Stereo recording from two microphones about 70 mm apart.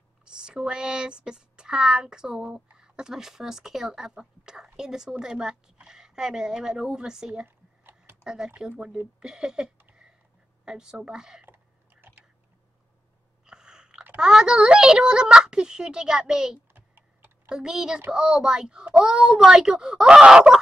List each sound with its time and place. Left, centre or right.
0.2 s speech: centre
7.4 s a sound: right
8.2 s speech: centre
11.4 s a sound: right
13.5 s chewing: centre
14.1 s speech: centre
16.7 s typing: right
17.5 s speech: centre